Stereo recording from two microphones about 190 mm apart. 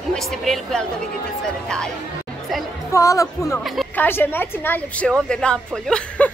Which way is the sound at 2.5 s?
Centre (ahead or behind).